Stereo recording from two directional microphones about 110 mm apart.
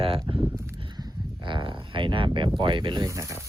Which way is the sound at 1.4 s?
45° right (ahead or behind).